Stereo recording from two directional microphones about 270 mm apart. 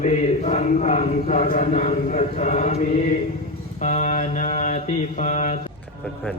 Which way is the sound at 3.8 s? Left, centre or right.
Left.